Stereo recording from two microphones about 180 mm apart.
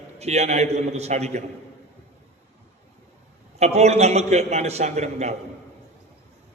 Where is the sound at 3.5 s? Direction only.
35° right (ahead or behind).